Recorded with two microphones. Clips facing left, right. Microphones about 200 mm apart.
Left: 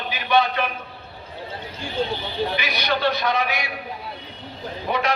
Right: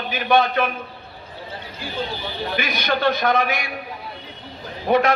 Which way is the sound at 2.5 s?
50° right (ahead or behind).